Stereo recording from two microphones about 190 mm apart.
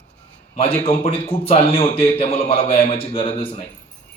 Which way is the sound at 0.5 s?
30° left (ahead or behind).